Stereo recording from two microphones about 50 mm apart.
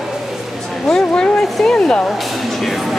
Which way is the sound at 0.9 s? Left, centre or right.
Centre.